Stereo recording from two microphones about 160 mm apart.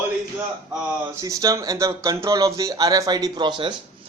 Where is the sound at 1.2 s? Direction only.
20° right (ahead or behind).